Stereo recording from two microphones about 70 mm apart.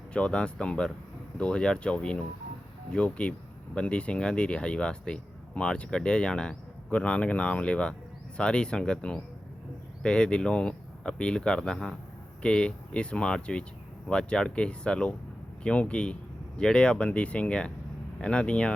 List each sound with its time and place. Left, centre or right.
0.1 s speech: centre